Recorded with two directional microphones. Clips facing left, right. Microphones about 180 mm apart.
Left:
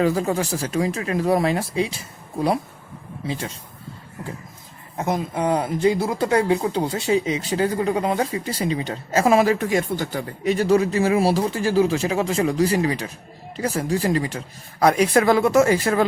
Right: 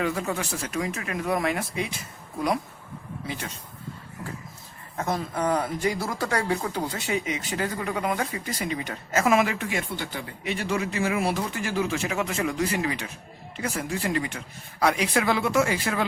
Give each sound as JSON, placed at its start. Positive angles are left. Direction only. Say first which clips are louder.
{"t": 0.0, "sound": "speech", "louder": "left 7 dB", "side_deg": 35}
{"t": 4.9, "sound": "speech", "louder": "left 4 dB", "side_deg": 20}